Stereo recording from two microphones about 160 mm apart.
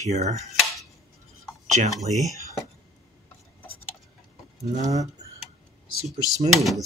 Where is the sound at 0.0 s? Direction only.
45° right (ahead or behind).